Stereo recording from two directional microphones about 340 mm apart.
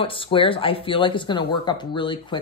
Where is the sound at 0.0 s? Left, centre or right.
Centre.